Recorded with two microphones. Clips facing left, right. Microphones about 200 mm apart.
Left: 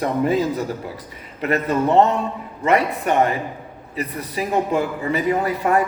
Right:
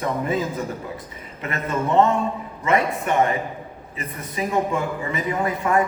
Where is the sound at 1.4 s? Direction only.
35° left (ahead or behind).